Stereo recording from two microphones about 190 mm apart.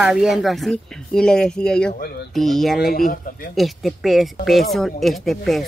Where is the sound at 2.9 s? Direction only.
50° left (ahead or behind).